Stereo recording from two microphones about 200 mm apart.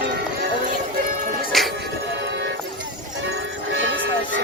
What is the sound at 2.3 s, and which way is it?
Music, 65° right (ahead or behind).